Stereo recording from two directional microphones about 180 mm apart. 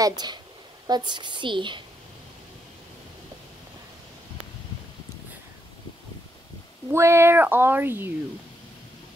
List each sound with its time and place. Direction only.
0.0 s a woman's voice: 20° right (ahead or behind)
6.9 s speech: 15° right (ahead or behind)